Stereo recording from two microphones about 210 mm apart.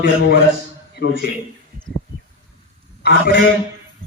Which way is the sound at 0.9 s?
50° left (ahead or behind).